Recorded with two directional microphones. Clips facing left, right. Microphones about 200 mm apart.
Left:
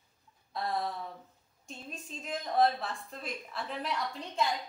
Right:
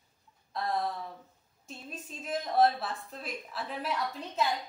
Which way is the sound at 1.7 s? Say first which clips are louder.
Right 1 dB; 5° right (ahead or behind).